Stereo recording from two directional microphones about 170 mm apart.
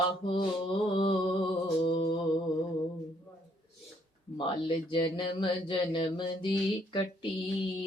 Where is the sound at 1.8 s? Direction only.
30° left (ahead or behind).